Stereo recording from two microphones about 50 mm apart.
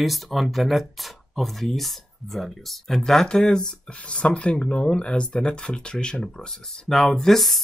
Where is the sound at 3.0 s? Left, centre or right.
Centre.